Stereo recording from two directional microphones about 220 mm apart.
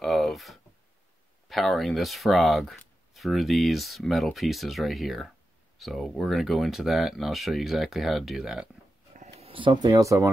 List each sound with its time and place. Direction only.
0.0 s a sound: centre (ahead or behind)
1.5 s speech: centre (ahead or behind)
9.1 s speech: 30° right (ahead or behind); by 10.3 s 15° right (ahead or behind)